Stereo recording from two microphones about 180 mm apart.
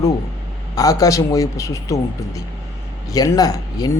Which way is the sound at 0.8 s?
20° left (ahead or behind).